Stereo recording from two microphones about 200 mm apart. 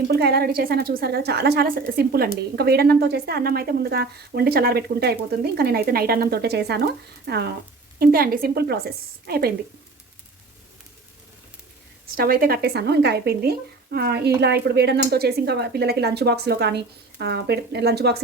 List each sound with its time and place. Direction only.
0.1 s a woman's voice: 50° right (ahead or behind)
12.1 s a woman's voice: 50° right (ahead or behind)